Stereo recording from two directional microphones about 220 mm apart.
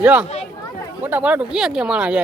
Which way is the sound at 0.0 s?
5° right (ahead or behind).